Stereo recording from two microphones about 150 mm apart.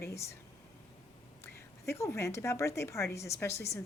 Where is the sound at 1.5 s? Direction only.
20° left (ahead or behind).